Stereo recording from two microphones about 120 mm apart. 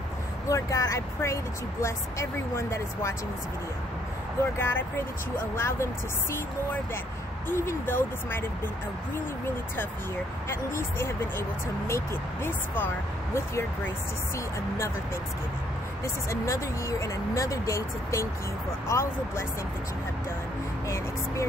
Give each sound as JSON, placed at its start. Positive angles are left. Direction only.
{"t": 0.5, "sound": "speech", "side_deg": 25}
{"t": 4.6, "sound": "speech", "side_deg": 20}
{"t": 7.4, "sound": "speech", "side_deg": 20}
{"t": 10.5, "sound": "speech", "side_deg": 20}
{"t": 16.3, "sound": "speech", "side_deg": 25}